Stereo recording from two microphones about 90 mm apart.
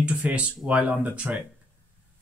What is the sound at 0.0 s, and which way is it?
Speech, 15° right (ahead or behind).